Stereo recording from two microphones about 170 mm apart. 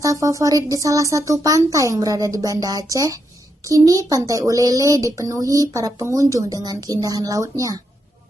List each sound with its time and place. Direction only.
0.0 s speech: 20° right (ahead or behind)